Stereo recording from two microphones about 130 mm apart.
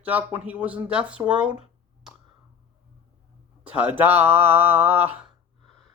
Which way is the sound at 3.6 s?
15° right (ahead or behind).